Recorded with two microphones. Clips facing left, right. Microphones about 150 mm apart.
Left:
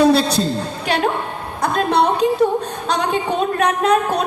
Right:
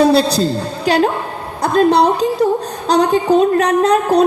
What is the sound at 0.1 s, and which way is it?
Speech, 35° right (ahead or behind).